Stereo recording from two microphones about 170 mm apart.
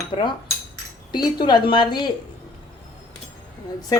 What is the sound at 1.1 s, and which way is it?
Speech, 25° left (ahead or behind).